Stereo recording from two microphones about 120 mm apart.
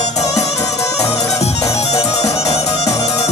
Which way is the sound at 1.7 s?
60° left (ahead or behind).